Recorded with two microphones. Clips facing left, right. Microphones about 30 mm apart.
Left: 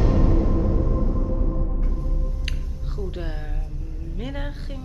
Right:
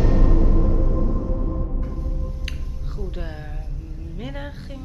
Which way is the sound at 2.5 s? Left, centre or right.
Centre.